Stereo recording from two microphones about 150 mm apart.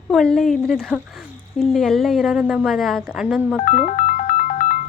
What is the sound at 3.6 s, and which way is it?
Music, 55° left (ahead or behind).